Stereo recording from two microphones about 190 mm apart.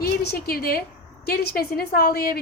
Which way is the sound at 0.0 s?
55° left (ahead or behind).